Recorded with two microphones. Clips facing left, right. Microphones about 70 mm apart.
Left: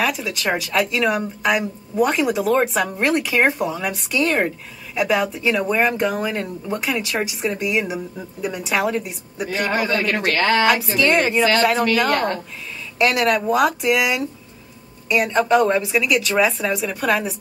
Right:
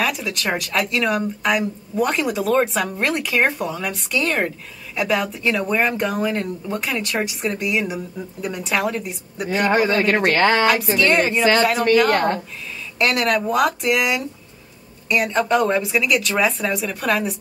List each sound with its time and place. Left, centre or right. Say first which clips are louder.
0.0 s speech: left 1 dB; centre
9.8 s speech: right 3 dB; right
10.6 s speech: even; centre